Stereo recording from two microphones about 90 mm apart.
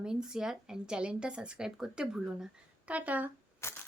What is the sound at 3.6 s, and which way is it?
Camera, 30° left (ahead or behind).